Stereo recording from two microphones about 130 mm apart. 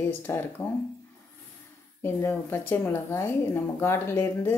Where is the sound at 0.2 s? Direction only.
15° left (ahead or behind).